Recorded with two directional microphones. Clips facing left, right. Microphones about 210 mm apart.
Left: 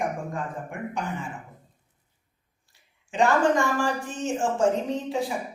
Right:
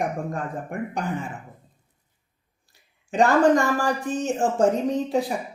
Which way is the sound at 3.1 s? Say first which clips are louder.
Right 4 dB; 40° right (ahead or behind).